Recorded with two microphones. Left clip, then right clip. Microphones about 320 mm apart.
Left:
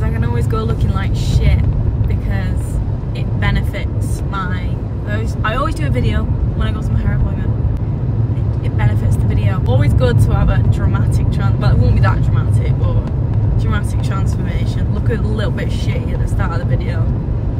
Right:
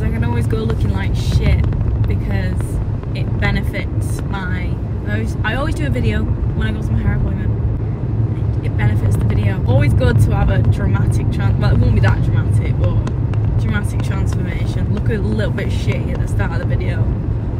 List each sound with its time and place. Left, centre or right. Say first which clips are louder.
5.9 s speech: even; centre
9.8 s speech: even; centre
11.4 s speech: left 1 dB; left
15.0 s speech: even; centre